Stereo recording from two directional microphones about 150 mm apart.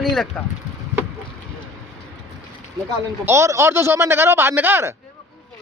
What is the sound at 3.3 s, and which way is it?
Speech, 20° right (ahead or behind).